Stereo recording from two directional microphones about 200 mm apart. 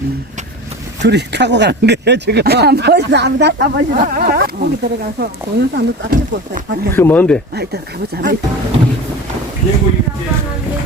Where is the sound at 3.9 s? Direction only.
45° right (ahead or behind).